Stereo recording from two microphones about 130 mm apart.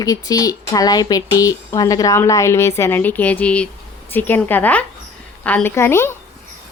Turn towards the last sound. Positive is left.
turn(degrees=20)  # may be behind; listen again after turning